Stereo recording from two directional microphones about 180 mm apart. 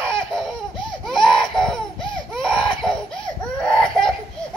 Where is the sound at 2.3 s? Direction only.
Centre (ahead or behind).